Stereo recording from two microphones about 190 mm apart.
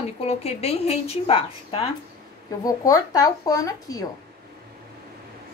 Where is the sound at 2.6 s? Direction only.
20° left (ahead or behind).